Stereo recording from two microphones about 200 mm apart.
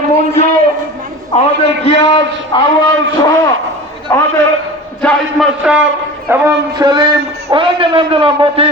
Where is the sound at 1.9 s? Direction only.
30° left (ahead or behind).